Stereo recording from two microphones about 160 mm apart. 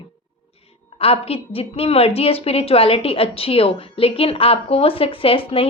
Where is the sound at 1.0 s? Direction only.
35° left (ahead or behind).